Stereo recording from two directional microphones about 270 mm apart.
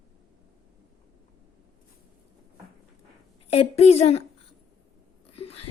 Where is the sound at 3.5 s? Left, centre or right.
Left.